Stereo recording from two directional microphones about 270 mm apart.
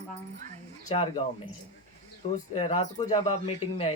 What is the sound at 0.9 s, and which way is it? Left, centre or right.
Speech, left.